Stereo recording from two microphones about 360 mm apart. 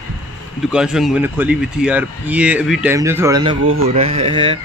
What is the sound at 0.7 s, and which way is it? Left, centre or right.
Speech, centre.